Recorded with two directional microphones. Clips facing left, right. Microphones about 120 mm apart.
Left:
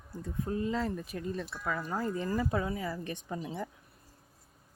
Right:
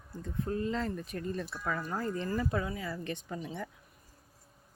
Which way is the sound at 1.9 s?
10° left (ahead or behind).